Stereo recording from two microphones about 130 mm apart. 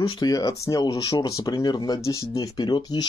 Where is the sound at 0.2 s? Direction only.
25° left (ahead or behind).